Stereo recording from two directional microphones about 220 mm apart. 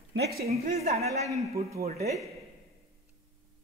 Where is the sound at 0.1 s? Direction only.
50° right (ahead or behind).